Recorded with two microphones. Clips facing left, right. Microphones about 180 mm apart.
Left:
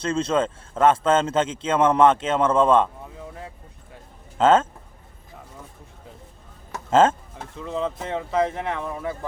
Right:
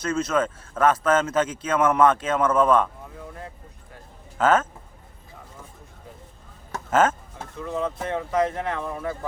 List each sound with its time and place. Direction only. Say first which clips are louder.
0.0 s speech: left 1 dB; 30° left (ahead or behind)
4.4 s speech: left 3 dB; 25° left (ahead or behind)
6.9 s speech: left 3 dB; 30° left (ahead or behind)